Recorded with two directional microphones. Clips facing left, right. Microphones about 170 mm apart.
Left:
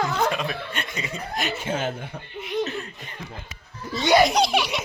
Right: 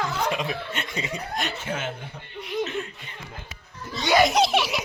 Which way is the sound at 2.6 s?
40° left (ahead or behind).